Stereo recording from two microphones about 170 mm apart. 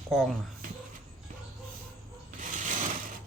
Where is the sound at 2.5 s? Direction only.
50° right (ahead or behind).